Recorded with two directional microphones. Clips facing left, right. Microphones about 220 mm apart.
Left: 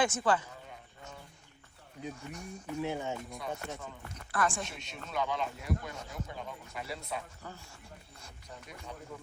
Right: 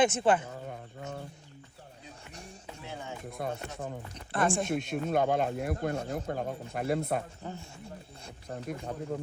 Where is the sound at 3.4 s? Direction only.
55° right (ahead or behind).